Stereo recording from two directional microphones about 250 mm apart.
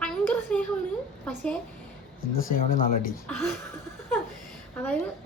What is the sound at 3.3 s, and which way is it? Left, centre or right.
Speech, centre.